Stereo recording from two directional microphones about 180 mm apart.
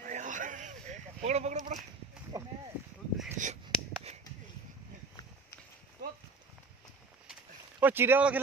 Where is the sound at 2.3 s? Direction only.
15° right (ahead or behind).